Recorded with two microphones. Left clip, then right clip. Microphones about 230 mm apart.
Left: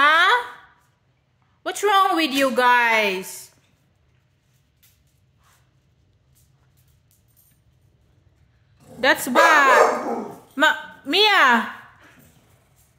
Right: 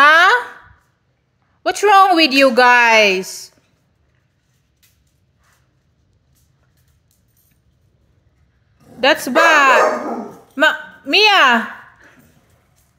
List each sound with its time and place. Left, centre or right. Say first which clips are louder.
0.0 s a sound: right 6 dB; right
1.6 s a woman's voice: right 8 dB; right
9.0 s a woman's voice: right 4 dB; centre